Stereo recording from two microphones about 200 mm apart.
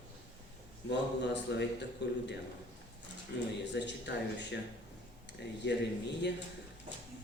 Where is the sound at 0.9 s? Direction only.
60° left (ahead or behind).